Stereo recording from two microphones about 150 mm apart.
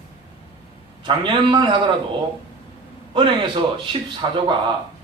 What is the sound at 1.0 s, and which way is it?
Speech, 30° right (ahead or behind).